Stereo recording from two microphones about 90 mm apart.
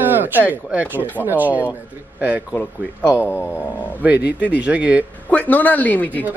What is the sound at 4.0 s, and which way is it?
Speech, 15° right (ahead or behind).